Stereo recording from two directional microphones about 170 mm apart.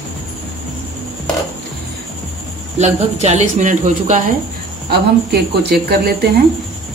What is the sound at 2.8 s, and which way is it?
A woman's voice, 40° right (ahead or behind).